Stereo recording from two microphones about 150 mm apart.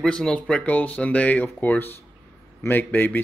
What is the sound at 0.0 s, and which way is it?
Speech, 5° left (ahead or behind).